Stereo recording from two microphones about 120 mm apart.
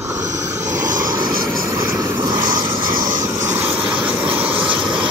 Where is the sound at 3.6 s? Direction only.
10° right (ahead or behind).